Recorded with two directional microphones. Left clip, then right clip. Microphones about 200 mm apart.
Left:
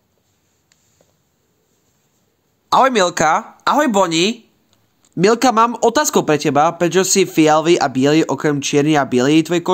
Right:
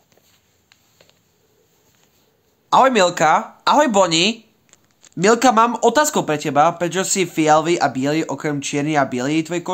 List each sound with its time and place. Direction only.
2.7 s speech: 20° left (ahead or behind)
3.6 s speech: 10° left (ahead or behind)